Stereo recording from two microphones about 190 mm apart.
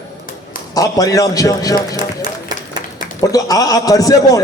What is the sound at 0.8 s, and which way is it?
A man's voice, 20° left (ahead or behind).